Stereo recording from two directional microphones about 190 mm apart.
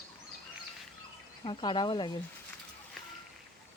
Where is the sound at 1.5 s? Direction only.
25° left (ahead or behind).